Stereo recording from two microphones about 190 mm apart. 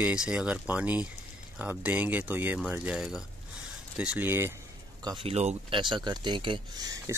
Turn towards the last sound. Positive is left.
turn(degrees=-20)  # may be behind; listen again after turning